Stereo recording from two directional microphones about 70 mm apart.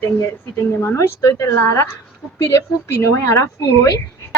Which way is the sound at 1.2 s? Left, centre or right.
Left.